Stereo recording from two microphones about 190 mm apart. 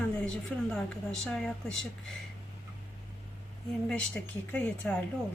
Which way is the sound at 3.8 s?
5° left (ahead or behind).